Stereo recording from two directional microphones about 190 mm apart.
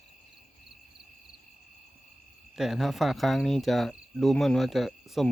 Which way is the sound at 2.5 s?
Centre (ahead or behind).